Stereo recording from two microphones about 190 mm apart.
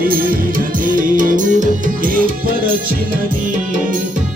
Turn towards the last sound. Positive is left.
turn(degrees=-50)  # may be behind; listen again after turning